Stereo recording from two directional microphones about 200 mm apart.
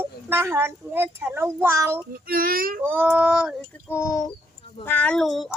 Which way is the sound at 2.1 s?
45° right (ahead or behind).